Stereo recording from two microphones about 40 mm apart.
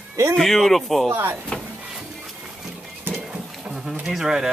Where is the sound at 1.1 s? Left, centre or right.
Right.